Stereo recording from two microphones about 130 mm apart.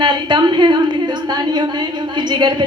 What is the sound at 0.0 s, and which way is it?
A woman's voice, 35° right (ahead or behind).